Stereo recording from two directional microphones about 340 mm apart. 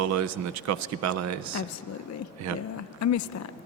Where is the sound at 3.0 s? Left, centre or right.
Left.